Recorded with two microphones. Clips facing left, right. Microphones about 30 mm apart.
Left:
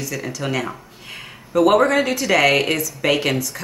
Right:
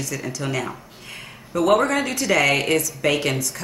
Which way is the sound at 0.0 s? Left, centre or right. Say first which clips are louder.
Left 2 dB; centre.